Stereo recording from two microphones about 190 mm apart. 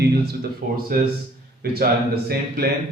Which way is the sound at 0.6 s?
45° right (ahead or behind).